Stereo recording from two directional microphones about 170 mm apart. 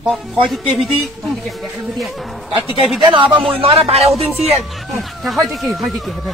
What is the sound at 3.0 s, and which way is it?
A man's voice, 25° right (ahead or behind).